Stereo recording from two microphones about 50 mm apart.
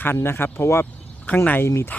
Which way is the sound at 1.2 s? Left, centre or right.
Left.